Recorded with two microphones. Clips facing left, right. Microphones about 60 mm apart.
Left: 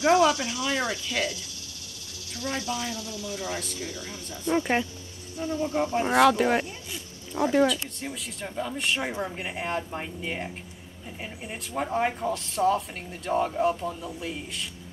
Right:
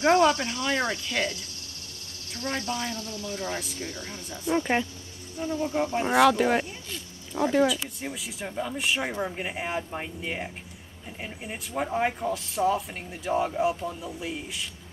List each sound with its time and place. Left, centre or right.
0.0 s speech: right
2.3 s speech: right
4.6 s speech: centre